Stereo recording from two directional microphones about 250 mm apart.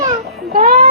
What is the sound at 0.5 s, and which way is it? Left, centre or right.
Speech, right.